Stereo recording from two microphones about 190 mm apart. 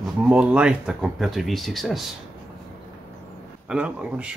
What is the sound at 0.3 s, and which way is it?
Speech, 5° right (ahead or behind).